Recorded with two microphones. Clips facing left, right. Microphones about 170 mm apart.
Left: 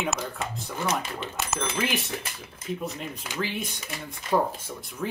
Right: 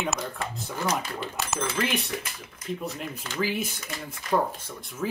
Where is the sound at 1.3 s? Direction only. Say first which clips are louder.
Even; centre (ahead or behind).